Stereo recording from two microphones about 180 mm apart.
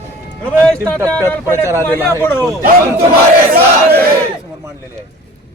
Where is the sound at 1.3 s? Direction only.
15° left (ahead or behind).